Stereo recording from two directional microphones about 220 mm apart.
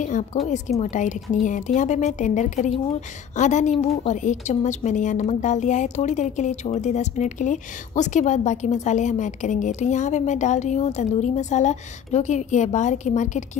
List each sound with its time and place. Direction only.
0.0 s a woman's voice: 35° left (ahead or behind)